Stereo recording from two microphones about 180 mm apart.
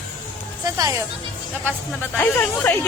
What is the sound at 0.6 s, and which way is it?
Speech, 20° right (ahead or behind).